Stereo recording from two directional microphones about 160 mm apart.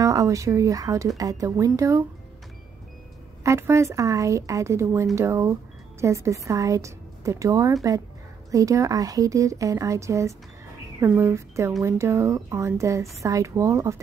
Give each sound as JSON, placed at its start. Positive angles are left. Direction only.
{"t": 0.0, "sound": "a woman's voice", "side_deg": -20}
{"t": 3.4, "sound": "a woman's voice", "side_deg": -20}